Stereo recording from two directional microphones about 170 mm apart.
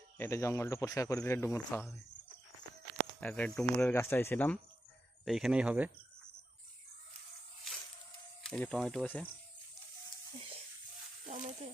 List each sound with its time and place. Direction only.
0.2 s speech: 15° left (ahead or behind)
3.2 s speech: 10° left (ahead or behind)
5.2 s speech: centre (ahead or behind)
8.4 s speech: 5° left (ahead or behind)
11.3 s speech: 45° right (ahead or behind)